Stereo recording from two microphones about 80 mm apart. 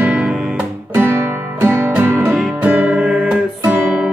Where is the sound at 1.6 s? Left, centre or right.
Right.